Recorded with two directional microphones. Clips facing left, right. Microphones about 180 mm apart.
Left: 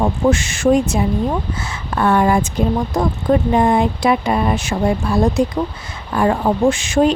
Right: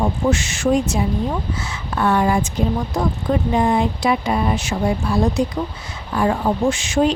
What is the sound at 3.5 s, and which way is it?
Speech, 55° left (ahead or behind).